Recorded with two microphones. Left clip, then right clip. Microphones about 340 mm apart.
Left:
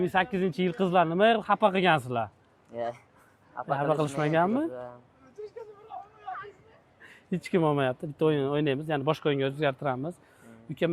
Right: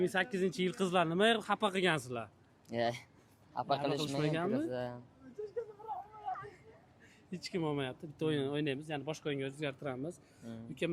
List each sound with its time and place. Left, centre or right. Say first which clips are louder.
0.0 s speech: left 7 dB; centre
2.6 s a man's voice: left 1 dB; right
3.9 s speech: left 9 dB; left
4.7 s speech: even; right
7.1 s speech: left 12 dB; left
8.3 s speech: left 7 dB; centre